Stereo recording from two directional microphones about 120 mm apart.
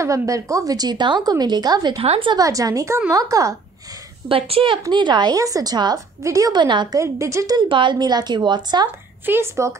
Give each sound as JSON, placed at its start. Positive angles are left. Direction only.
{"t": 0.0, "sound": "a woman's voice", "side_deg": -25}
{"t": 2.0, "sound": "a woman's voice", "side_deg": -50}
{"t": 2.3, "sound": "a woman's voice", "side_deg": -30}
{"t": 4.3, "sound": "a woman's voice", "side_deg": -50}
{"t": 4.8, "sound": "a woman's voice", "side_deg": -40}
{"t": 7.0, "sound": "a woman's voice", "side_deg": -25}
{"t": 7.6, "sound": "a woman's voice", "side_deg": -45}
{"t": 9.2, "sound": "a woman's voice", "side_deg": -20}